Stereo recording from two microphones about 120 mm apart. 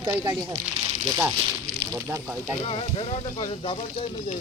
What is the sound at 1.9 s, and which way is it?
Speech, 20° right (ahead or behind).